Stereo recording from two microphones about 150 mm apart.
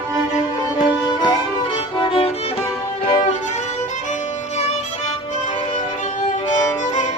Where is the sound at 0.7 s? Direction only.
30° left (ahead or behind).